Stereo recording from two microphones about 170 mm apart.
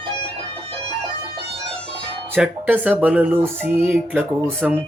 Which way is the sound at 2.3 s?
10° right (ahead or behind).